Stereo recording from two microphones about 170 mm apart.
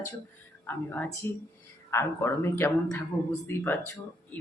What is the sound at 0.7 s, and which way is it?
A man's voice, 10° left (ahead or behind).